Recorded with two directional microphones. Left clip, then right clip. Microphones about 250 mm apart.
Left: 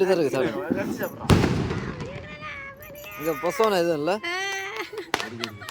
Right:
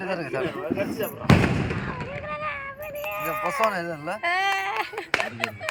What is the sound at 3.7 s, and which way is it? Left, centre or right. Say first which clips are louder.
Speech: left 6 dB; left.